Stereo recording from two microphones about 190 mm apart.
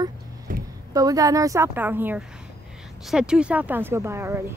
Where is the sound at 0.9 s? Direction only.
20° right (ahead or behind).